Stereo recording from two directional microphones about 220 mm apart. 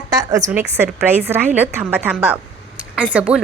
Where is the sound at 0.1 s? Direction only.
15° right (ahead or behind).